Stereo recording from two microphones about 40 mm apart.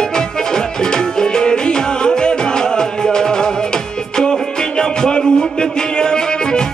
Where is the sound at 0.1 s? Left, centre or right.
Centre.